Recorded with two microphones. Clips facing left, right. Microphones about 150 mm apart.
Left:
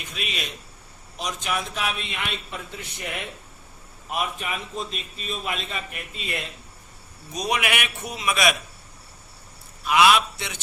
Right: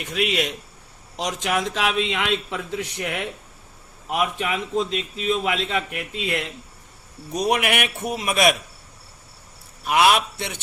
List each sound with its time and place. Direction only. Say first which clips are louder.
0.0 s a man's voice: right 10 dB; 75° right (ahead or behind)
1.1 s a man's voice: right 5 dB; 90° right
7.3 s a man's voice: right 5 dB; 55° right (ahead or behind)
9.8 s a man's voice: even; 50° right (ahead or behind)